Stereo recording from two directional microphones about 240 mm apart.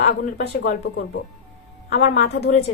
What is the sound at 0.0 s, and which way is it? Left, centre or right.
A woman's voice, left.